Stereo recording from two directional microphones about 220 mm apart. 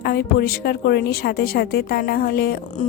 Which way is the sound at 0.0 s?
45° left (ahead or behind).